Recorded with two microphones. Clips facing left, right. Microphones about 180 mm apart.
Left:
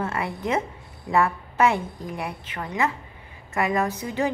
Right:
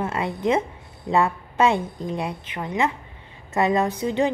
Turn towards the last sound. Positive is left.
turn(degrees=-20)  # may be behind; listen again after turning